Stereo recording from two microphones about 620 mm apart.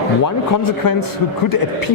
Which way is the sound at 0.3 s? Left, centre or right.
Left.